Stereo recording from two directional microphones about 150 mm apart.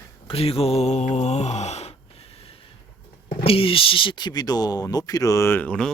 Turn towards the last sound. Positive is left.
turn(degrees=10)  # may be behind; listen again after turning